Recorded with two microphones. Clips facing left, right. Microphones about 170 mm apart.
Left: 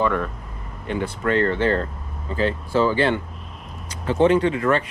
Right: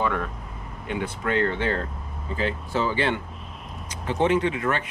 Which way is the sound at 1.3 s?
35° left (ahead or behind).